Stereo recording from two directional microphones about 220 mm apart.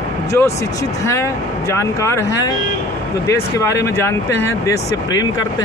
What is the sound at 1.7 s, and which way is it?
Speech, 15° left (ahead or behind).